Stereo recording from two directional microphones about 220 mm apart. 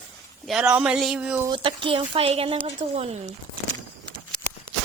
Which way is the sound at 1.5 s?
20° right (ahead or behind).